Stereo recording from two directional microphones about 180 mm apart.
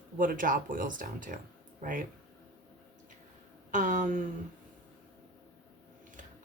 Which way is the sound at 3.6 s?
45° right (ahead or behind).